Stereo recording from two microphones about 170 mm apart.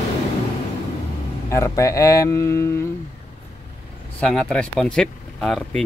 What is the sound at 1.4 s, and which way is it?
Speech, 15° left (ahead or behind).